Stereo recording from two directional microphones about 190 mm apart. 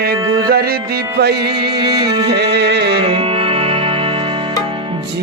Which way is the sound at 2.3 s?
60° right (ahead or behind).